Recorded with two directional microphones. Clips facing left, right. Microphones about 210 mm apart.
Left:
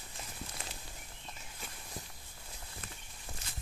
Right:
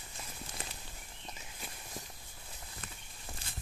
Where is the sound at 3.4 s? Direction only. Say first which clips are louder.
Even; 30° right (ahead or behind).